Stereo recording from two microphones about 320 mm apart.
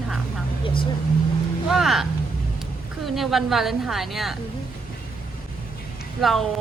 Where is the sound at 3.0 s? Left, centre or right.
Centre.